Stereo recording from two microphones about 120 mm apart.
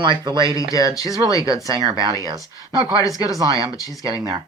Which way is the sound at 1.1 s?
30° left (ahead or behind).